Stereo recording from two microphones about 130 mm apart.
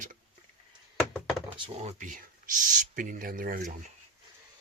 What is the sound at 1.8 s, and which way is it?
Speech, 85° right.